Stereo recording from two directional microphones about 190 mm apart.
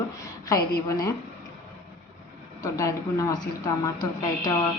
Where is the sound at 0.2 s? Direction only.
20° left (ahead or behind).